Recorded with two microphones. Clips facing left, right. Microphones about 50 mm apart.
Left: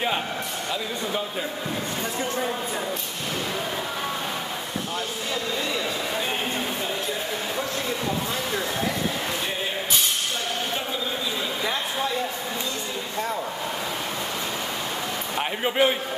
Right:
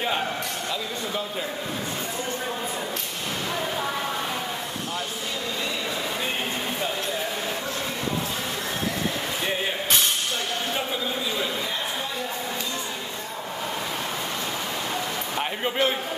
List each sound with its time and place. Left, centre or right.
15.3 s a man's voice: centre